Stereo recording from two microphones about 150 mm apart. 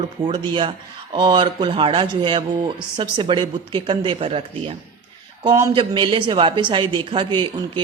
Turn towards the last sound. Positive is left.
turn(degrees=-30)  # may be behind; listen again after turning